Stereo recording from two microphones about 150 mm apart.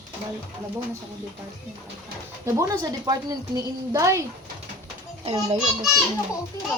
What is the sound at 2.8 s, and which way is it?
A woman's voice, 25° right (ahead or behind).